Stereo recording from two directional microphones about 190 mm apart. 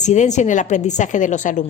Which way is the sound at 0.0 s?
40° left (ahead or behind).